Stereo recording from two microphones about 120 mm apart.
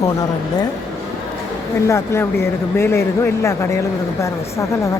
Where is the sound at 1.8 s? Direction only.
20° left (ahead or behind).